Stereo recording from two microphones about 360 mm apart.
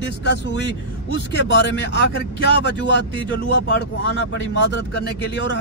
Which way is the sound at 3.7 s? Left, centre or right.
Left.